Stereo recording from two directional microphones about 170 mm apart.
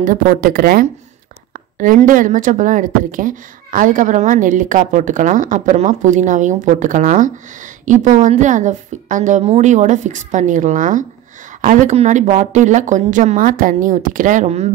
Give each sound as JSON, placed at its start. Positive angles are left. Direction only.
{"t": 0.0, "sound": "speech", "side_deg": -55}